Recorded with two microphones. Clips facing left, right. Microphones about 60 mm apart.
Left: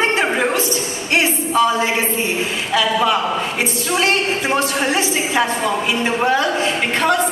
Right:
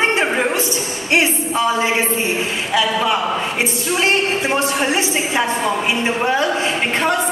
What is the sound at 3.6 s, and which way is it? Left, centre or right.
A woman's voice, right.